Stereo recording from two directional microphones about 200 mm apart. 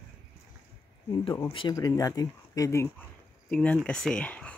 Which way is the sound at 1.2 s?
15° left (ahead or behind).